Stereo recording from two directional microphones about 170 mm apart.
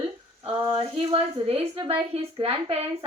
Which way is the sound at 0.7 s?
35° right (ahead or behind).